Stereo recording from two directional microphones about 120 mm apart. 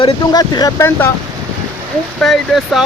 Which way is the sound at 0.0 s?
35° left (ahead or behind).